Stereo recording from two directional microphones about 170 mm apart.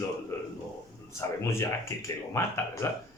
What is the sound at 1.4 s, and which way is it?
Speech, 15° left (ahead or behind).